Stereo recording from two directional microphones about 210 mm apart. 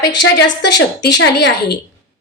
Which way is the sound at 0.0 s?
55° left (ahead or behind).